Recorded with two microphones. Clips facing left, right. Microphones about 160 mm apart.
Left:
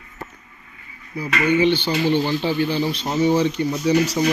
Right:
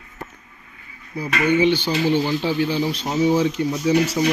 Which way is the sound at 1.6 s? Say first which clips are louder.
Even; 10° right (ahead or behind).